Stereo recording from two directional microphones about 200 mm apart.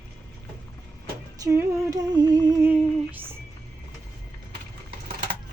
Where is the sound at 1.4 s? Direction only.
15° right (ahead or behind).